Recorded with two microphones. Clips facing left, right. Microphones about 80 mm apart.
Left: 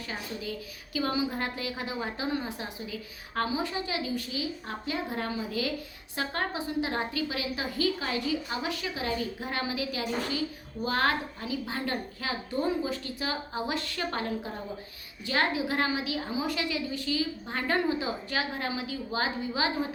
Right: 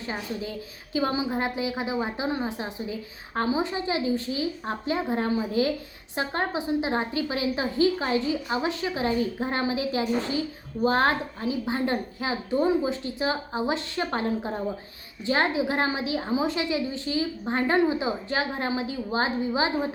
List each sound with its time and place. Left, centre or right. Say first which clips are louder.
0.0 s a woman's voice: right 4 dB; right